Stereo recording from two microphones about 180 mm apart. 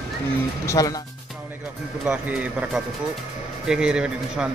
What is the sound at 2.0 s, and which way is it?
Speech, 10° right (ahead or behind).